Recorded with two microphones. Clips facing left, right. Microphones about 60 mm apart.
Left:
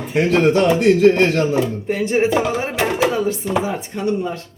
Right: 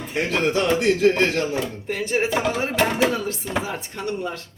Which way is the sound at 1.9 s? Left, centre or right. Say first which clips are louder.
Left 3 dB; left.